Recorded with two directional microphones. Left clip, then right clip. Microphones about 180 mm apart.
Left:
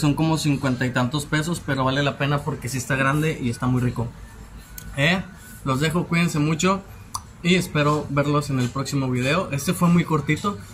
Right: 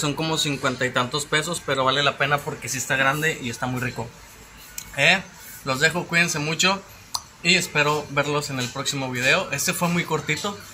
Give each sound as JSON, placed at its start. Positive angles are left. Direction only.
{"t": 0.0, "sound": "speech", "side_deg": 5}